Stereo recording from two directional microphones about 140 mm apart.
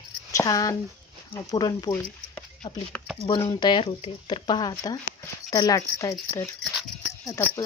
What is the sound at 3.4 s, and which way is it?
Speech, 40° left (ahead or behind).